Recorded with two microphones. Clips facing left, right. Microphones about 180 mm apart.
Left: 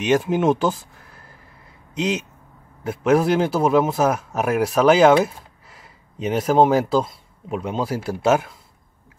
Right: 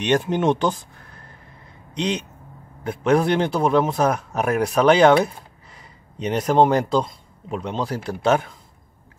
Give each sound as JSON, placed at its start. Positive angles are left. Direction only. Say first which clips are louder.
{"t": 0.0, "sound": "a man's voice", "louder": "left 1 dB", "side_deg": 5}